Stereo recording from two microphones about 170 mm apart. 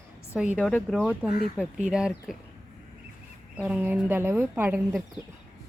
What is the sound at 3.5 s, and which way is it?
Speech, 10° right (ahead or behind).